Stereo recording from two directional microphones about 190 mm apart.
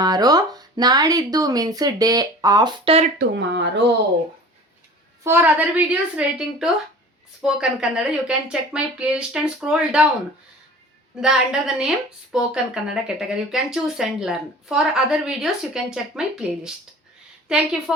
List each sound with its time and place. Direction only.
0.0 s speech: 20° right (ahead or behind)
3.2 s speech: 65° right (ahead or behind)
5.2 s a woman's voice: 10° right (ahead or behind)
11.2 s speech: 5° right (ahead or behind)